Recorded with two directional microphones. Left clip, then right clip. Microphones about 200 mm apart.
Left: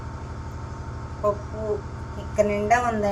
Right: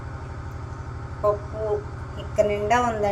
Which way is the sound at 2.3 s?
20° right (ahead or behind).